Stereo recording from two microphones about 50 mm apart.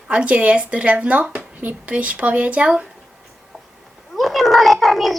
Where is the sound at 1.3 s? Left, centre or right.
Right.